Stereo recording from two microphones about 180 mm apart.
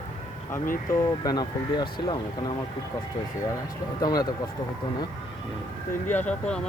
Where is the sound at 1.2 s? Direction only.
20° left (ahead or behind).